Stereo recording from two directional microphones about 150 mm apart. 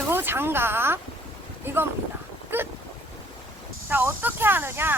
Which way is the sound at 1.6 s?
15° right (ahead or behind).